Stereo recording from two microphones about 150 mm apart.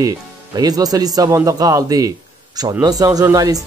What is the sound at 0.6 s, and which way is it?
Speech, 25° right (ahead or behind).